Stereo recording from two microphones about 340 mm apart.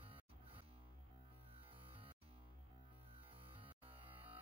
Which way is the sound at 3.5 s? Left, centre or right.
Centre.